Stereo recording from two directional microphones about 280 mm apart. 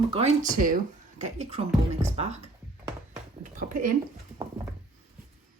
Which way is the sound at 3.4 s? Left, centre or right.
Right.